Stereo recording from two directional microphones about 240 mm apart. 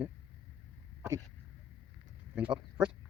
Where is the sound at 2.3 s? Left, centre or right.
Centre.